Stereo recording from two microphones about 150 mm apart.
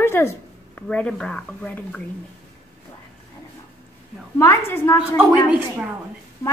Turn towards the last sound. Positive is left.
turn(degrees=-10)  # may be behind; listen again after turning